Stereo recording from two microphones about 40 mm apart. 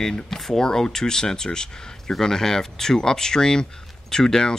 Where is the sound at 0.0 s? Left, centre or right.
Centre.